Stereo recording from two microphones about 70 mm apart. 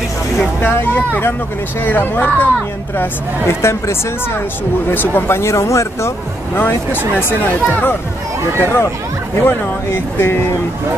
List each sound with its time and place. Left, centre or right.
0.6 s speech: left
3.4 s speech: left
6.5 s speech: left